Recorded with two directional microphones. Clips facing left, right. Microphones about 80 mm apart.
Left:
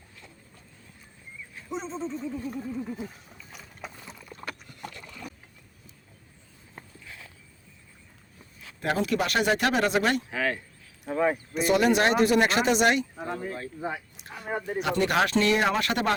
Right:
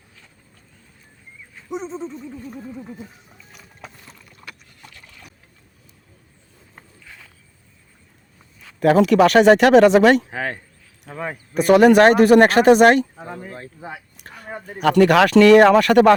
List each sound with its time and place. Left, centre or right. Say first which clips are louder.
1.7 s a sound: right 4 dB; centre
3.5 s boat: even; centre
4.3 s a sound: left 5 dB; left
8.8 s speech: right 13 dB; right
10.2 s speech: right 1 dB; right
11.1 s speech: left 5 dB; centre
11.5 s speech: right 13 dB; right
13.2 s a sound: left 1 dB; centre
14.8 s speech: right 11 dB; right